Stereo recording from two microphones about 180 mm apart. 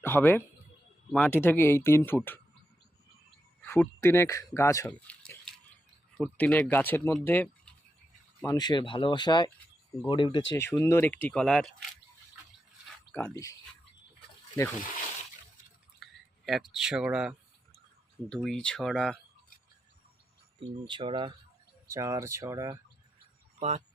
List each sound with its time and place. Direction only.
0.0 s speech: 10° left (ahead or behind)
3.6 s speech: 10° left (ahead or behind)
4.9 s a sound: 5° left (ahead or behind)
6.1 s speech: 5° left (ahead or behind)
8.5 s speech: 25° left (ahead or behind)
10.5 s speech: 15° left (ahead or behind)
16.0 s drip: centre (ahead or behind)
16.5 s speech: centre (ahead or behind)
20.6 s speech: 30° right (ahead or behind)
21.9 s speech: 15° right (ahead or behind)
23.6 s speech: 35° right (ahead or behind)